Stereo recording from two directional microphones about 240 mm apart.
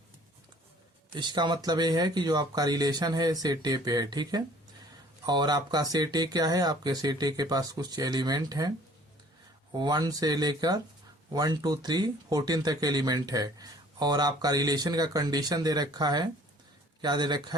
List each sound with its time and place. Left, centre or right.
1.1 s speech: centre
9.7 s speech: centre